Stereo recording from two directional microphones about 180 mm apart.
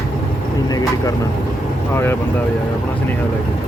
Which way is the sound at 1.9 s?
15° left (ahead or behind).